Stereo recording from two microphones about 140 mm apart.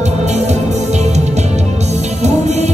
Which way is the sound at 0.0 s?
55° right (ahead or behind).